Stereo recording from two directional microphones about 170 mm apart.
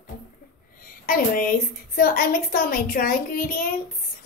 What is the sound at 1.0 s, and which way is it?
A woman's voice, 55° left (ahead or behind).